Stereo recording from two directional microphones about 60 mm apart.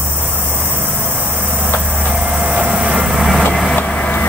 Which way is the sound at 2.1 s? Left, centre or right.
Centre.